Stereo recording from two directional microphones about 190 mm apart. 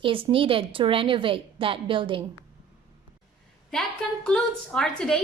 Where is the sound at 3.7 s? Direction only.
Centre (ahead or behind).